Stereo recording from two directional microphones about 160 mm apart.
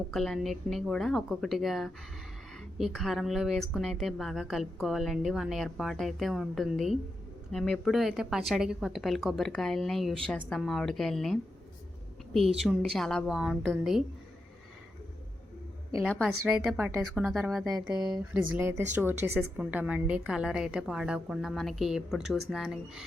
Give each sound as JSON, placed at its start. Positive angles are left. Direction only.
{"t": 0.1, "sound": "speech", "side_deg": 0}
{"t": 12.5, "sound": "speech", "side_deg": 0}
{"t": 16.0, "sound": "speech", "side_deg": 0}
{"t": 16.7, "sound": "speech", "side_deg": -15}
{"t": 17.4, "sound": "speech", "side_deg": 0}
{"t": 18.1, "sound": "speech", "side_deg": -15}